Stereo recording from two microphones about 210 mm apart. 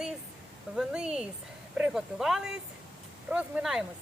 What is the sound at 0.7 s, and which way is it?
Speech, 5° right (ahead or behind).